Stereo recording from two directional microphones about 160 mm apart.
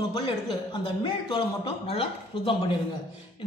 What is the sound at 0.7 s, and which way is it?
Speech, 30° left (ahead or behind).